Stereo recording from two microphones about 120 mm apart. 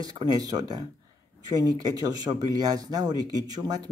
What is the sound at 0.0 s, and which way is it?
A man's voice, 35° right (ahead or behind).